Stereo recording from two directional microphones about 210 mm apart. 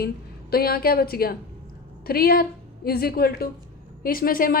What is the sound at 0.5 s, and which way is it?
A woman's voice, 45° left (ahead or behind).